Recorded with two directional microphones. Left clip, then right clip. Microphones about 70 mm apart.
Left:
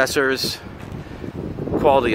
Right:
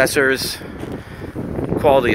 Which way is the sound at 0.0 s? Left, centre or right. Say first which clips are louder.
Right 3 dB; centre.